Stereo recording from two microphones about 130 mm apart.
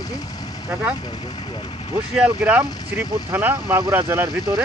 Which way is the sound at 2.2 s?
10° right (ahead or behind).